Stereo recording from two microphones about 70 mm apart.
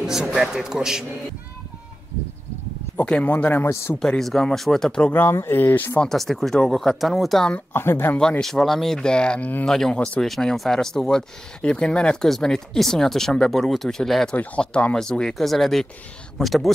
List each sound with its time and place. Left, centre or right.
0.0 s a man's voice: centre
3.1 s speech: centre
4.2 s speech: centre
5.1 s speech: left
5.9 s speech: centre
7.7 s speech: left
8.2 s speech: centre
9.9 s speech: centre
10.2 s speech: centre
14.3 s speech: left; by 16.7 s centre